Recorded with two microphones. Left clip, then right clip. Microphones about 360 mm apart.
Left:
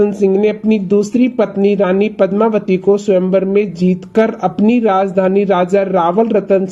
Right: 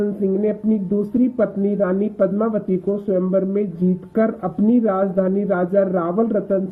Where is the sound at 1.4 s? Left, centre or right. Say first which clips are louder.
Left 8 dB; left.